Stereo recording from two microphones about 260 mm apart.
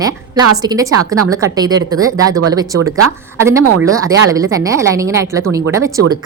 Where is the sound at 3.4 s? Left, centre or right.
Centre.